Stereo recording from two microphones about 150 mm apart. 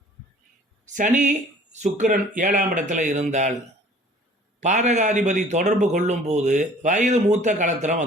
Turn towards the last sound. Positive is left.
turn(degrees=-55)  # may be behind; listen again after turning